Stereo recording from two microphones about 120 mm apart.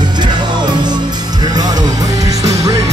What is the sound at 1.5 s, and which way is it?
Music, 35° right (ahead or behind).